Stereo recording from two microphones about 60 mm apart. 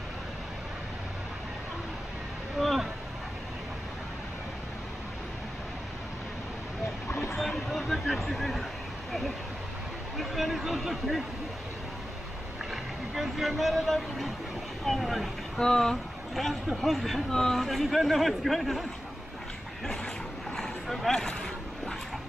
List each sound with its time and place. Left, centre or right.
2.6 s a sound: centre
7.1 s vehicle: left
7.3 s a sound: centre
10.1 s speech: centre
12.7 s speech: centre
20.5 s vehicle: centre